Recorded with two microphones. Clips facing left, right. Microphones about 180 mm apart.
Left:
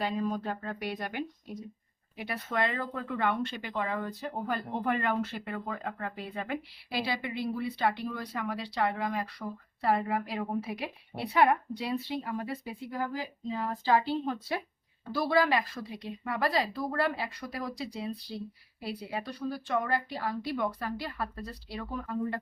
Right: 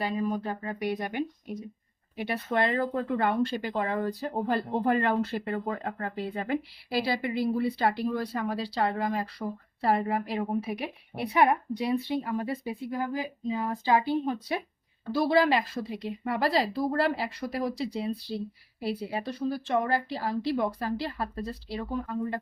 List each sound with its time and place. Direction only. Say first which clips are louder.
0.0 s speech: right 2 dB; 10° right (ahead or behind)
2.1 s speech: right 4 dB; 25° right (ahead or behind)